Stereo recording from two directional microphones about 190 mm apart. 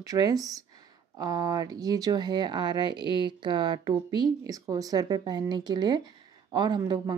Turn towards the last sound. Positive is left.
turn(degrees=-20)  # may be behind; listen again after turning